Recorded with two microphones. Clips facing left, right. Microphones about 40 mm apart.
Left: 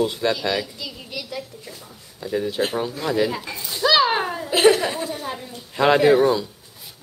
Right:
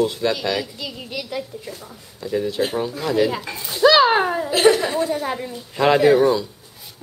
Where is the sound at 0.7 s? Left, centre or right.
Right.